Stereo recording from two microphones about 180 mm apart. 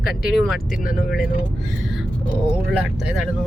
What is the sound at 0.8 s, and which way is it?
Speech, 50° left (ahead or behind).